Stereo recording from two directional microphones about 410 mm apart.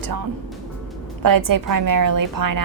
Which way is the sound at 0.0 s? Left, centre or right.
Right.